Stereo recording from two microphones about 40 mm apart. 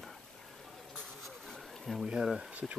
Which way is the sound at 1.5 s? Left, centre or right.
Centre.